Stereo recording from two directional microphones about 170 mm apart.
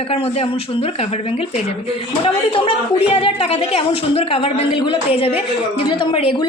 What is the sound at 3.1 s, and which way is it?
Speech, 35° left (ahead or behind).